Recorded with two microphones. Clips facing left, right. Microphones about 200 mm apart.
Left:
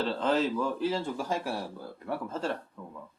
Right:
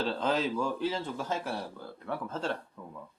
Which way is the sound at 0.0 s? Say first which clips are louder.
Left 2 dB; centre (ahead or behind).